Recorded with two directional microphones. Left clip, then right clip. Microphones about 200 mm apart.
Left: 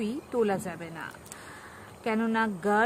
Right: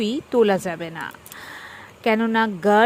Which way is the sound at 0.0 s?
25° right (ahead or behind).